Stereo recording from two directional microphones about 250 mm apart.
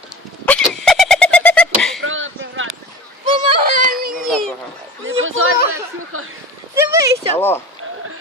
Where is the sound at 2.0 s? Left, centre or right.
Right.